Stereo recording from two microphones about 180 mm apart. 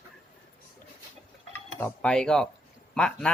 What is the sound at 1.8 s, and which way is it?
Speech, 5° left (ahead or behind).